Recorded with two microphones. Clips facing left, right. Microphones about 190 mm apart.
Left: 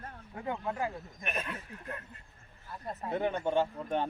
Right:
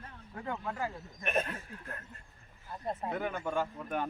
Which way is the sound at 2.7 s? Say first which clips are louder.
Right 2 dB; 25° right (ahead or behind).